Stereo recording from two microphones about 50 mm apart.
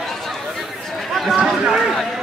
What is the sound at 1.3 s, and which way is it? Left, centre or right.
Speech, centre.